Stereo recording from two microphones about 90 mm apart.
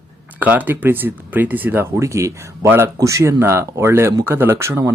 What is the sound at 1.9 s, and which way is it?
Speech, 35° right (ahead or behind).